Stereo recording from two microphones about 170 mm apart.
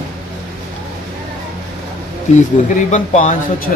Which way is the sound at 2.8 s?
50° left (ahead or behind).